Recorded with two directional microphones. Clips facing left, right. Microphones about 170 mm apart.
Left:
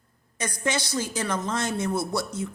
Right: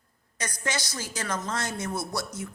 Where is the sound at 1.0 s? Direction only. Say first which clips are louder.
Left 5 dB; 20° left (ahead or behind).